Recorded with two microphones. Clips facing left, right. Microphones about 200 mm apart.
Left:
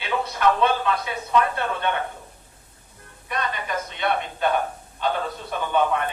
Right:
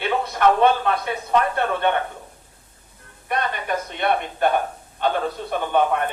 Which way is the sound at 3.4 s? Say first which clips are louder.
Right 1 dB; 55° right (ahead or behind).